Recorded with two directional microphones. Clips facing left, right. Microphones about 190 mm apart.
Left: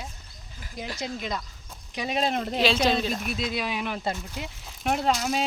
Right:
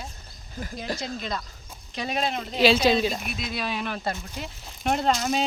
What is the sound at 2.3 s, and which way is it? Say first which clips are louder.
Speech: left 4 dB; 50° left (ahead or behind).